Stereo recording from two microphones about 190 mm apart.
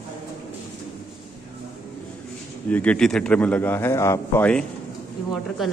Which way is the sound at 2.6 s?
5° left (ahead or behind).